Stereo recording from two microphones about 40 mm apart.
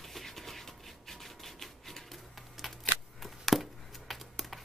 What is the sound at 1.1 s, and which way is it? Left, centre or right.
Rub, centre.